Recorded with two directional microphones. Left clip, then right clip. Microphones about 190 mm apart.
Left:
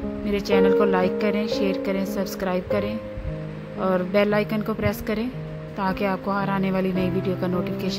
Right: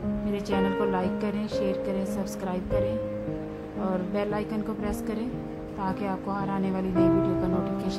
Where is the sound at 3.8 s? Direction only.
15° left (ahead or behind).